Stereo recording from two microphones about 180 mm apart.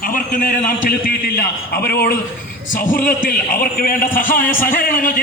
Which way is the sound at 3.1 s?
50° left (ahead or behind).